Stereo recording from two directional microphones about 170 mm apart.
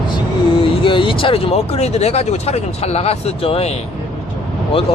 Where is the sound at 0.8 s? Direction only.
30° left (ahead or behind).